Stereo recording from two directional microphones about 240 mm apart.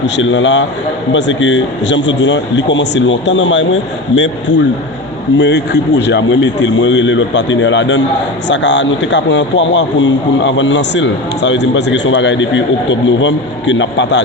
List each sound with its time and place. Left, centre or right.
0.2 s a man's voice: left